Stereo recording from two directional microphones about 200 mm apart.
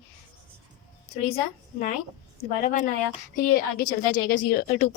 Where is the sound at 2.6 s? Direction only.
40° left (ahead or behind).